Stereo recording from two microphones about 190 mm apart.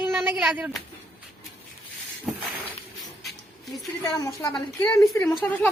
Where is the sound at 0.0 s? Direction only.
5° right (ahead or behind).